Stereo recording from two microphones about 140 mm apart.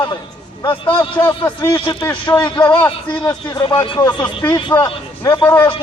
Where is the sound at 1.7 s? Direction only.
35° left (ahead or behind).